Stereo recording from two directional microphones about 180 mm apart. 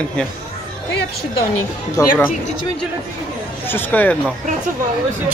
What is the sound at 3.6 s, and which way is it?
Speech, 10° left (ahead or behind).